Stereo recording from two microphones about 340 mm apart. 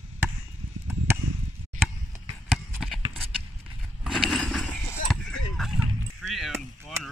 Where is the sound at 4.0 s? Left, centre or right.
Centre.